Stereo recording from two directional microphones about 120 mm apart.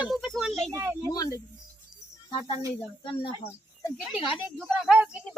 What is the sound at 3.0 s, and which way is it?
Speech, 45° left (ahead or behind).